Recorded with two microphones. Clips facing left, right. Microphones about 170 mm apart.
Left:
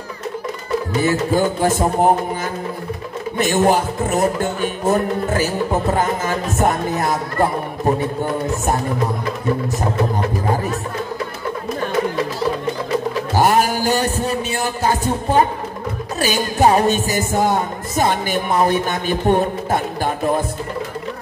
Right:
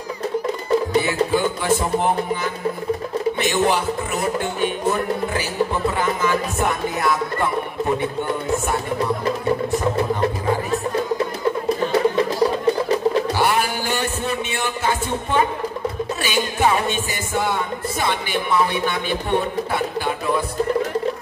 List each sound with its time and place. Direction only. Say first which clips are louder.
1.0 s speech: left 3 dB; 45° left (ahead or behind)
3.3 s speech: left 7 dB; 45° left (ahead or behind)
13.3 s music: left 4 dB; 45° left (ahead or behind)
16.2 s speech: left 5 dB; 40° left (ahead or behind)